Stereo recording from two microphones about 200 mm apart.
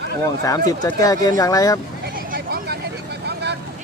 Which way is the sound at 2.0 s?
50° right (ahead or behind).